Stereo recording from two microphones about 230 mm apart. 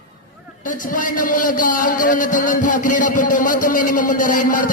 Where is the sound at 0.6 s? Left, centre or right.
Left.